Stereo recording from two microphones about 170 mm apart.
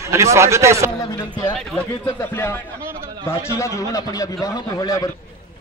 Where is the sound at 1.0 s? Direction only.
10° left (ahead or behind).